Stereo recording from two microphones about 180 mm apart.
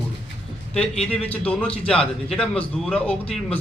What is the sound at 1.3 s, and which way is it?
A man's voice, 5° left (ahead or behind).